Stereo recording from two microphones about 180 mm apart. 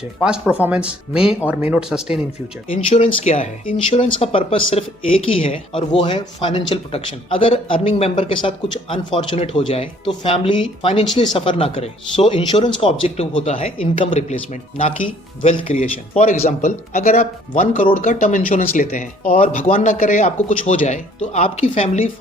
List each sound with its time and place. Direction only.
0.2 s speech: 5° right (ahead or behind)
2.7 s speech: 40° left (ahead or behind)